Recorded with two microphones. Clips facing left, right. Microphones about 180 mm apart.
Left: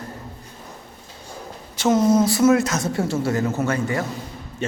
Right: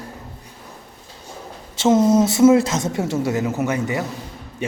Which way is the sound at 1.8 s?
25° right (ahead or behind).